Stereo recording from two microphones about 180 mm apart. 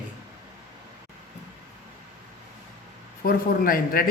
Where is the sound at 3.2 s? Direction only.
55° left (ahead or behind).